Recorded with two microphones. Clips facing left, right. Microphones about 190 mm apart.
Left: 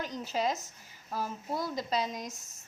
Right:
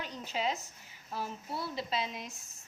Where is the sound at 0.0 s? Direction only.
40° left (ahead or behind).